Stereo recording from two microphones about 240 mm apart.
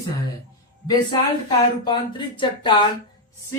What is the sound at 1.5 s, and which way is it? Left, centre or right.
Speech, centre.